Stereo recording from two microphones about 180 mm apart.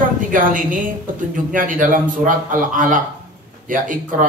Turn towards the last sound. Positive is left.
turn(degrees=-45)  # may be behind; listen again after turning